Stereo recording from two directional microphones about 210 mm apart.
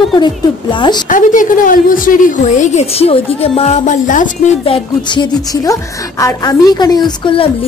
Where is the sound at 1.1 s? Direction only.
40° left (ahead or behind).